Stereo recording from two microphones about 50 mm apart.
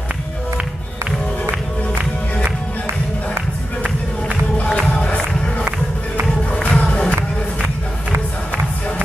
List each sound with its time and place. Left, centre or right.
4.6 s music: centre
6.7 s music: left